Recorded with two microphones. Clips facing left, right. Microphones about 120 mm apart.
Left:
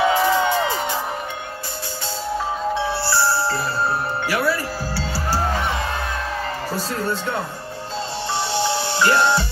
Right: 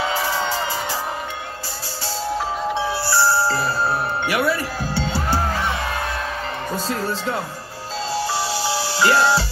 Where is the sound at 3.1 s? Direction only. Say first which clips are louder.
Right 4 dB; 25° right (ahead or behind).